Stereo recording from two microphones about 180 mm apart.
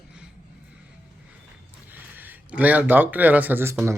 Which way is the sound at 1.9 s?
10° right (ahead or behind).